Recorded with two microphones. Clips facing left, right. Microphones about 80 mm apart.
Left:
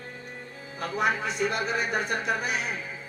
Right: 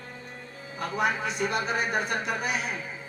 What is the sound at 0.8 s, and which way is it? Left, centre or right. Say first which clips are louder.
Speech: even; left.